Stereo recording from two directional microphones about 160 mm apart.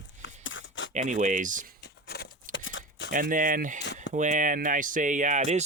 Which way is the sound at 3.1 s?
60° right (ahead or behind).